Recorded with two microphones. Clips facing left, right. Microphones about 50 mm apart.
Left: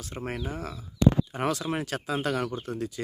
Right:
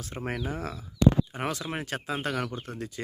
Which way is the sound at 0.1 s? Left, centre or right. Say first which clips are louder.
Even; centre.